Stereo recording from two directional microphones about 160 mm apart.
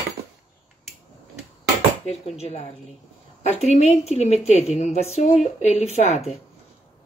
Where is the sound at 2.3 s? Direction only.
40° left (ahead or behind).